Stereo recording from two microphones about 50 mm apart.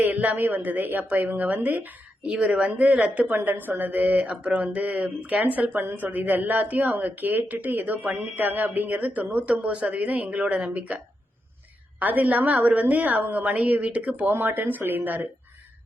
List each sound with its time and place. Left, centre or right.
0.0 s speech: right
2.4 s speech: right
3.3 s speech: right
4.3 s a sound: centre
4.5 s speech: right
14.3 s speech: right